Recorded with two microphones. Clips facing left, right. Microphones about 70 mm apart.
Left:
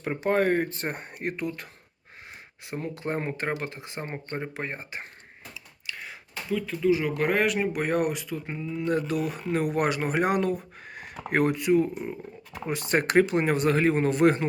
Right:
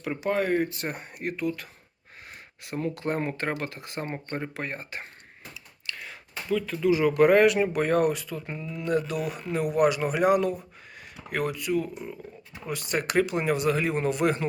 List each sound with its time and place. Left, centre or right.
0.0 s speech: left
2.6 s speech: left
4.0 s speech: centre
4.5 s speech: centre
8.9 s speech: left